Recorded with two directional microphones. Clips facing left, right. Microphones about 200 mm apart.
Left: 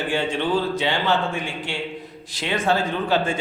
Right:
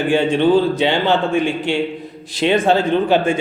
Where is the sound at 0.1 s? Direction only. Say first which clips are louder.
Right 10 dB; 25° right (ahead or behind).